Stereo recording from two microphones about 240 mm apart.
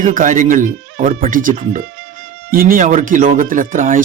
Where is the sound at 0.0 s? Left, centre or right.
Right.